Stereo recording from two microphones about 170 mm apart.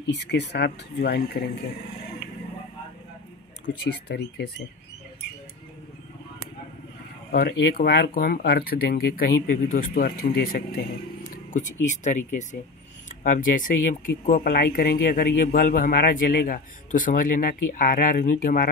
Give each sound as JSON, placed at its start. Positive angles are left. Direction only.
{"t": 0.1, "sound": "speech", "side_deg": 85}
{"t": 3.7, "sound": "speech", "side_deg": 90}
{"t": 4.1, "sound": "speech", "side_deg": 75}
{"t": 7.3, "sound": "speech", "side_deg": 65}